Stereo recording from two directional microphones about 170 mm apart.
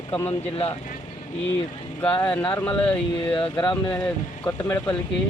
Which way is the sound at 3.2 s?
30° left (ahead or behind).